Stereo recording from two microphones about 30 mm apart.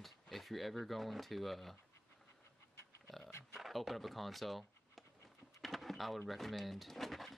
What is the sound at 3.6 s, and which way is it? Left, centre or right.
Speech, centre.